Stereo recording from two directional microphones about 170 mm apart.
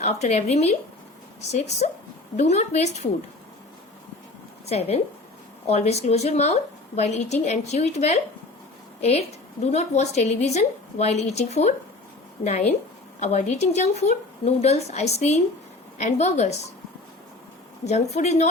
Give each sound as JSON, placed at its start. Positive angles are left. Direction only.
{"t": 0.0, "sound": "speech", "side_deg": 40}
{"t": 4.6, "sound": "a woman's voice", "side_deg": 35}
{"t": 13.1, "sound": "speech", "side_deg": 40}
{"t": 17.8, "sound": "speech", "side_deg": 40}